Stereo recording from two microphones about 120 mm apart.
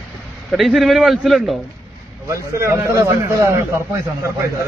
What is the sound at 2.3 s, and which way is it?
A man's voice, 25° right (ahead or behind).